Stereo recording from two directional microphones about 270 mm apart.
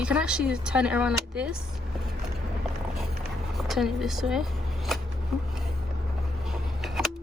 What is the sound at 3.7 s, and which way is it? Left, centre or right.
Speech, centre.